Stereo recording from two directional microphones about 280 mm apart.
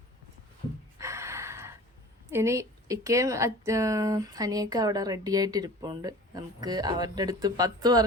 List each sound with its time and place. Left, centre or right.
0.9 s gasp: centre
2.3 s speech: centre